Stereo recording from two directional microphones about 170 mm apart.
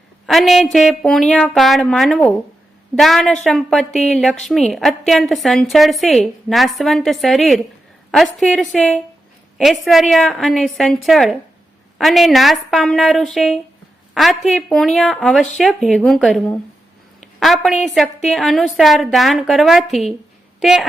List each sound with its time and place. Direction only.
0.3 s a woman's voice: centre (ahead or behind)